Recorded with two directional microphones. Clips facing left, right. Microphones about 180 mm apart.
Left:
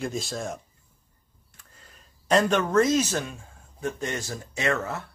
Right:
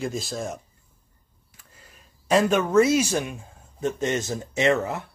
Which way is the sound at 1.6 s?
5° right (ahead or behind).